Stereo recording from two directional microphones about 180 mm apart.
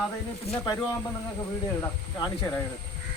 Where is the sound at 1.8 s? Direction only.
15° left (ahead or behind).